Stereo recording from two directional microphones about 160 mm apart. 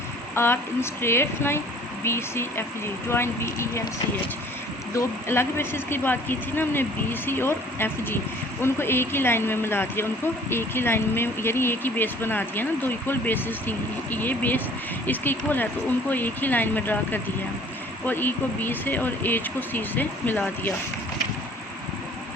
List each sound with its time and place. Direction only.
0.3 s speech: 15° left (ahead or behind)
4.9 s speech: 15° left (ahead or behind)